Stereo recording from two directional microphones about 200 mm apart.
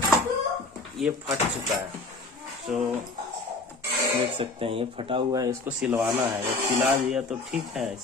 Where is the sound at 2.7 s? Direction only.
Centre (ahead or behind).